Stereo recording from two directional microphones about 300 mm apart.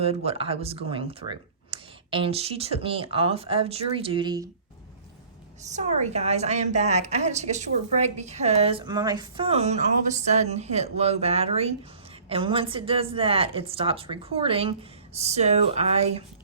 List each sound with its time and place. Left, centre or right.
0.0 s a woman's voice: right
5.7 s a woman's voice: right